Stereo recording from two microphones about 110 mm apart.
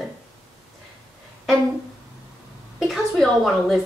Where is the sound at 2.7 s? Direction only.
Centre (ahead or behind).